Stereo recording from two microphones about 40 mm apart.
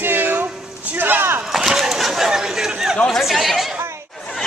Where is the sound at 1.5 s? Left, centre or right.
Centre.